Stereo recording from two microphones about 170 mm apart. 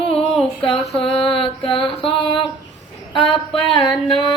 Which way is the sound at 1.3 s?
30° left (ahead or behind).